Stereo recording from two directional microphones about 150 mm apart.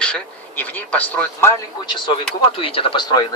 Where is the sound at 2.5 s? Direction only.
35° left (ahead or behind).